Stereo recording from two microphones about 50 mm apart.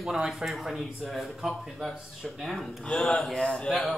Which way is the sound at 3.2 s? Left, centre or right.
Centre.